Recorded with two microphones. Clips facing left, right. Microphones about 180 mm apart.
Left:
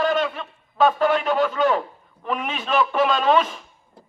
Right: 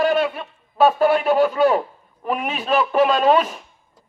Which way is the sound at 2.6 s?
35° right (ahead or behind).